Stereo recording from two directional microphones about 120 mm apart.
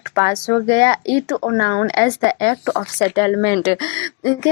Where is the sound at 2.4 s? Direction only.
40° left (ahead or behind).